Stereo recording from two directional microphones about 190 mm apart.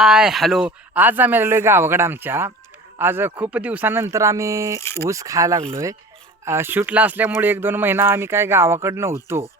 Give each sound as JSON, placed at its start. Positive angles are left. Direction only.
{"t": 0.0, "sound": "speech", "side_deg": -5}
{"t": 4.8, "sound": "speech", "side_deg": 15}
{"t": 5.0, "sound": "speech", "side_deg": -15}